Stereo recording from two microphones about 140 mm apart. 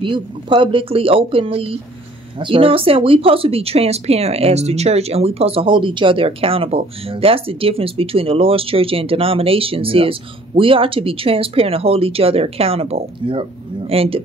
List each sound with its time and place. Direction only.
0.0 s speech: 35° right (ahead or behind)